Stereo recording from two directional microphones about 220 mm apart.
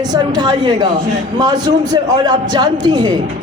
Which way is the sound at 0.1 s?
20° right (ahead or behind).